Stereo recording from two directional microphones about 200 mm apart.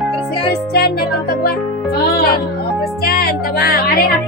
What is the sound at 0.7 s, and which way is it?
Music, 50° left (ahead or behind).